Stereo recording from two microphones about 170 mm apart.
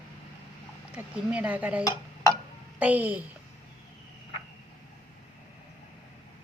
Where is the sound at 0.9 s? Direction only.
10° right (ahead or behind).